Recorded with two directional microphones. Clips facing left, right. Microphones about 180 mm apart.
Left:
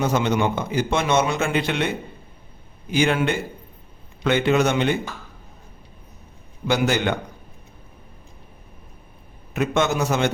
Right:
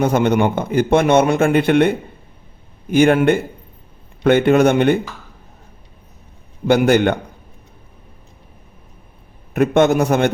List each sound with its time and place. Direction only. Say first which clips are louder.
0.0 s speech: right 6 dB; 55° right (ahead or behind)
6.7 s speech: right 8 dB; 55° right (ahead or behind)
9.5 s speech: right 8 dB; 55° right (ahead or behind)